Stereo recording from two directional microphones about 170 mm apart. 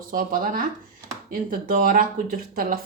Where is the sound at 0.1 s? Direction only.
55° right (ahead or behind).